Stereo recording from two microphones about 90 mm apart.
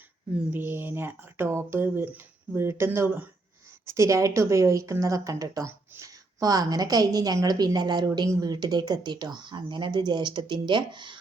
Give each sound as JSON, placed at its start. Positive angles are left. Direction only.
{"t": 0.5, "sound": "a woman's voice", "side_deg": -25}